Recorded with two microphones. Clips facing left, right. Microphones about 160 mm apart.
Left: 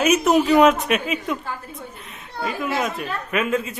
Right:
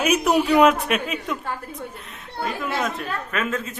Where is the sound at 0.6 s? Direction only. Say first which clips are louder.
Left 1 dB; centre (ahead or behind).